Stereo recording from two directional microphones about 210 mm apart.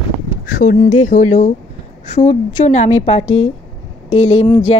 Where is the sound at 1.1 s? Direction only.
35° left (ahead or behind).